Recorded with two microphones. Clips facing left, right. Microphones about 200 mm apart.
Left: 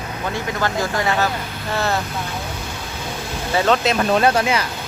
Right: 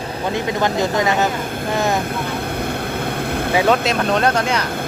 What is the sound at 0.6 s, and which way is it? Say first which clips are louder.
Speech: right 3 dB; 20° right (ahead or behind).